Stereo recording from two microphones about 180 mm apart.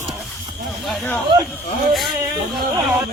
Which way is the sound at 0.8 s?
Centre (ahead or behind).